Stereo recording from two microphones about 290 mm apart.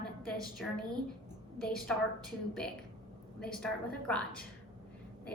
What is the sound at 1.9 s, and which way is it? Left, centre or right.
Speech, centre.